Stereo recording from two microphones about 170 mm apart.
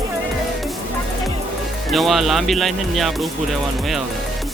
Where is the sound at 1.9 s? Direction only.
Centre (ahead or behind).